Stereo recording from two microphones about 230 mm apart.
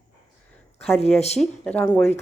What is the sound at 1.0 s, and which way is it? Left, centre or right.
Speech, left.